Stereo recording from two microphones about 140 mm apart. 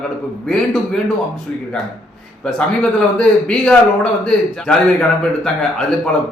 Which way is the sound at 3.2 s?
5° left (ahead or behind).